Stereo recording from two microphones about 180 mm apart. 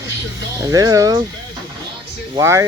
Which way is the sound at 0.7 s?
20° right (ahead or behind).